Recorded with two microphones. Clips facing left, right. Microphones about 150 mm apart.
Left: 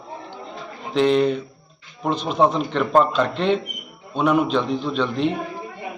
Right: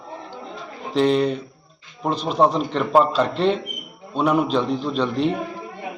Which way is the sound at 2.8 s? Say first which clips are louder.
Even; 5° left (ahead or behind).